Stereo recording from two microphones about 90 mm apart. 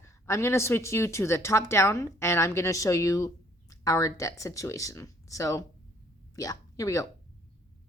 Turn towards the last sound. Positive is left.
turn(degrees=35)  # may be behind; listen again after turning